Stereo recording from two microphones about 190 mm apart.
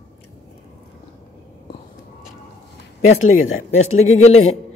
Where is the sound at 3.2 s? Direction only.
90° left.